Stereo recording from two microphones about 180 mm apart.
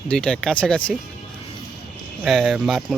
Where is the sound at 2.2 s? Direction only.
Centre (ahead or behind).